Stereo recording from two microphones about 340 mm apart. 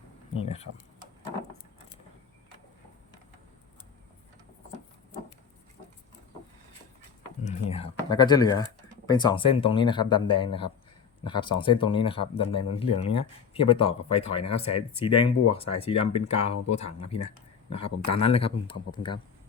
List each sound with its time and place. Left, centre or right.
0.4 s speech: centre
7.4 s a sound: centre
9.0 s speech: centre